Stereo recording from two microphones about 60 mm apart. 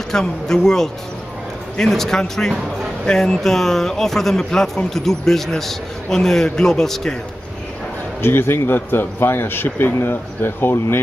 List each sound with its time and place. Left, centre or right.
0.1 s speech: centre
8.2 s a man's voice: left